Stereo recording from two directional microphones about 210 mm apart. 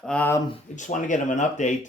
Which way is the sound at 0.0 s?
5° left (ahead or behind).